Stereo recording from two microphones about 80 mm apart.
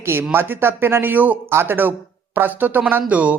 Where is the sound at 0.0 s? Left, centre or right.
Right.